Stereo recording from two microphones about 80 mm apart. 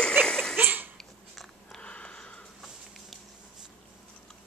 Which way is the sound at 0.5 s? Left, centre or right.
Right.